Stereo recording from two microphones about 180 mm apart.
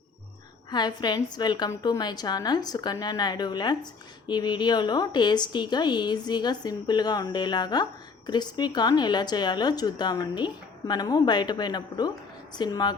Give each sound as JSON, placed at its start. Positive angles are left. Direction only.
{"t": 0.7, "sound": "a woman's voice", "side_deg": 25}